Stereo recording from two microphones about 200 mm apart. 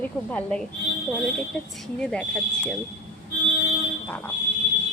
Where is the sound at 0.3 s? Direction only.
5° left (ahead or behind).